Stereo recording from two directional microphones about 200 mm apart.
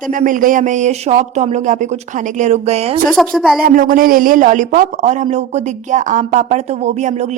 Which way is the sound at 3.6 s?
45° right (ahead or behind).